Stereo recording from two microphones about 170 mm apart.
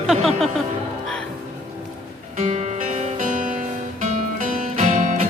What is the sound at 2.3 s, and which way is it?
Music, 40° right (ahead or behind).